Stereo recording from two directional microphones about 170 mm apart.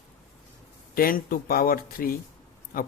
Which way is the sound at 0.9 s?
60° left (ahead or behind).